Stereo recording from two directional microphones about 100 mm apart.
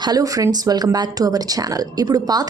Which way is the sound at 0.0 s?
40° right (ahead or behind).